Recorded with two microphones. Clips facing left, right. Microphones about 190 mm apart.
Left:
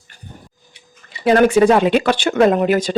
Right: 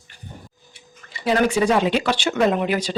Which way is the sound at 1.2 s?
55° left (ahead or behind).